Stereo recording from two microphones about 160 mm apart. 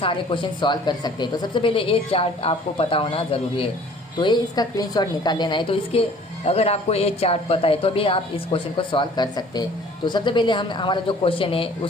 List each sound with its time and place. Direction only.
0.0 s a woman's voice: 30° left (ahead or behind)